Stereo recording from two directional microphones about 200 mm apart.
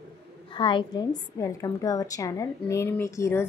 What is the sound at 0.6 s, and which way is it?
A woman's voice, 25° left (ahead or behind).